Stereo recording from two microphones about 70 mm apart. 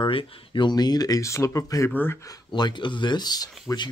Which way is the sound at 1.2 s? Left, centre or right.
Left.